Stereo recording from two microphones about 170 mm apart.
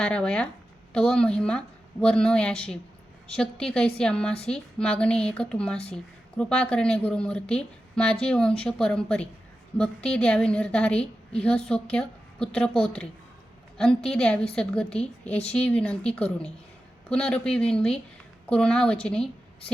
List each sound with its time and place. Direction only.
0.0 s a woman's voice: 5° left (ahead or behind)
5.7 s a woman's voice: 35° left (ahead or behind)
6.3 s a woman's voice: 5° left (ahead or behind)